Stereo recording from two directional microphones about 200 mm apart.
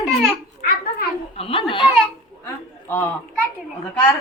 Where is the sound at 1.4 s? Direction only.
25° left (ahead or behind).